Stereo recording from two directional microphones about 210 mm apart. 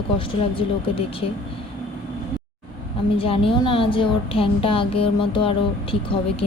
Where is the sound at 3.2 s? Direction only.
25° left (ahead or behind).